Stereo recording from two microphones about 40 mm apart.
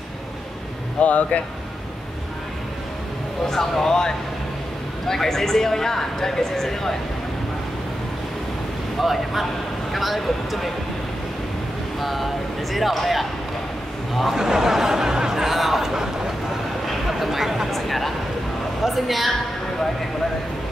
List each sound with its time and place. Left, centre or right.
1.0 s speech: left
3.4 s speech: centre
9.0 s speech: centre
12.0 s speech: centre
14.4 s a sound: centre
17.6 s a sound: centre
18.8 s speech: centre